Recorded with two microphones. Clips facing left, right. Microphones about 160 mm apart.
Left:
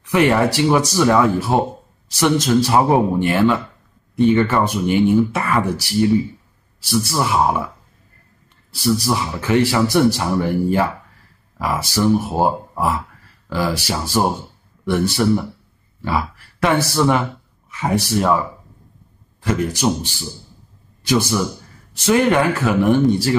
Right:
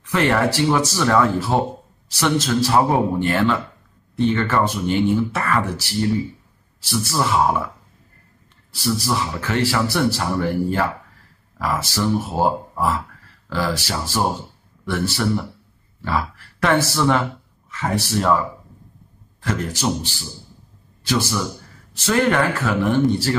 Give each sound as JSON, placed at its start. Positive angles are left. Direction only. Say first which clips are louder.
{"t": 0.0, "sound": "a man's voice", "louder": "left 3 dB", "side_deg": 15}
{"t": 8.7, "sound": "a man's voice", "louder": "left 3 dB", "side_deg": 15}
{"t": 13.5, "sound": "a man's voice", "louder": "left 2 dB", "side_deg": 15}
{"t": 19.5, "sound": "a man's voice", "louder": "left 4 dB", "side_deg": 15}